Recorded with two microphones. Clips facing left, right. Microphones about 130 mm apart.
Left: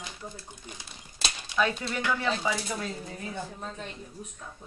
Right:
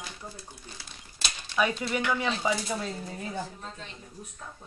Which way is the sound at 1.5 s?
10° right (ahead or behind).